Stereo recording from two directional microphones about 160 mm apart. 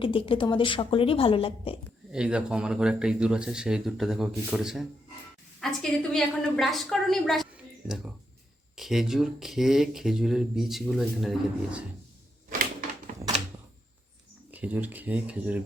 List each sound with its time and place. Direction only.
0.0 s a woman's voice: 35° left (ahead or behind)
2.1 s speech: 5° right (ahead or behind)
8.7 s speech: centre (ahead or behind)
14.5 s speech: 10° right (ahead or behind)